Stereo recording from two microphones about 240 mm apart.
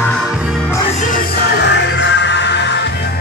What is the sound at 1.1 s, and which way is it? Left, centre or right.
Music, left.